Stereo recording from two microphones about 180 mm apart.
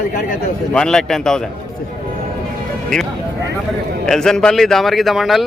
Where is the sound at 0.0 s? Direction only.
55° left (ahead or behind).